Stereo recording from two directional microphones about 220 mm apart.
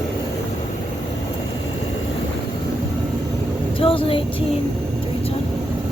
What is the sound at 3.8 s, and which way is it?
Speech, 25° left (ahead or behind).